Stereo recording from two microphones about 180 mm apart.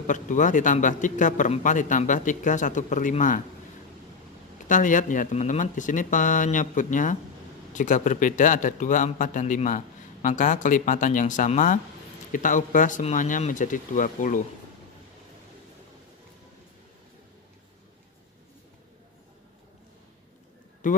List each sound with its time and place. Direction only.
0.0 s a man's voice: 45° left (ahead or behind)
4.6 s a man's voice: 45° left (ahead or behind)
20.8 s a man's voice: 45° left (ahead or behind)